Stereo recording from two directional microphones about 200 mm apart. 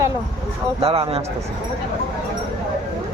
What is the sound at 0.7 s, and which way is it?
Speech, 30° right (ahead or behind).